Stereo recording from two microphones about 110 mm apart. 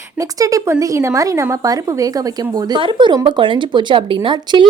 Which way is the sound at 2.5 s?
45° right (ahead or behind).